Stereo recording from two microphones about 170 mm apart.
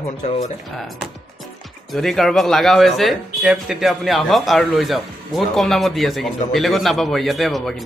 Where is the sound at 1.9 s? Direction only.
Centre (ahead or behind).